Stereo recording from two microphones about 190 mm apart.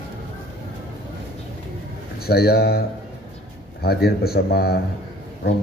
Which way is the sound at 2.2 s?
55° left (ahead or behind).